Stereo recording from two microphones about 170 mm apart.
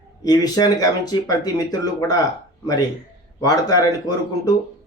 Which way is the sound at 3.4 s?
20° left (ahead or behind).